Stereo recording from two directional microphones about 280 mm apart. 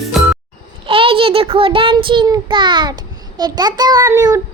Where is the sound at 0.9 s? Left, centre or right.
Centre.